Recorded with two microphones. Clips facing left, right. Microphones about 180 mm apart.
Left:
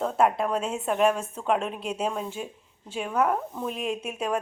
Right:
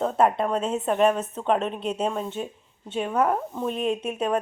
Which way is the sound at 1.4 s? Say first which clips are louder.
Right 2 dB; 5° left (ahead or behind).